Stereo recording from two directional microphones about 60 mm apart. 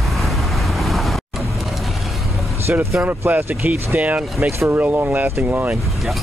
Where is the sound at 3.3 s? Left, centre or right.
Right.